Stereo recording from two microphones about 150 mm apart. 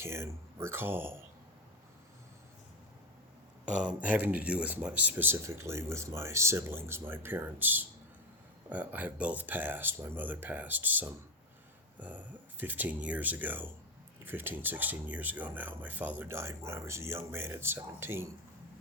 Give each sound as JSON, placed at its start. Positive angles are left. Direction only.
{"t": 0.0, "sound": "speech", "side_deg": -15}
{"t": 3.7, "sound": "speech", "side_deg": -5}